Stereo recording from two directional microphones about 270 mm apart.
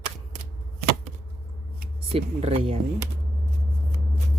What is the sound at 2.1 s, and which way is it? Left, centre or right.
Speech, right.